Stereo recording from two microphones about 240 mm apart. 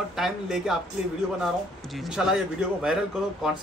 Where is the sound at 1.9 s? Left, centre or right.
Centre.